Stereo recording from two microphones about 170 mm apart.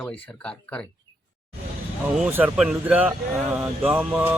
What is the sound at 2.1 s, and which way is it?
Speech, 5° right (ahead or behind).